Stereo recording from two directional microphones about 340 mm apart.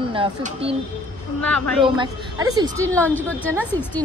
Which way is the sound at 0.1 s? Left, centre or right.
Centre.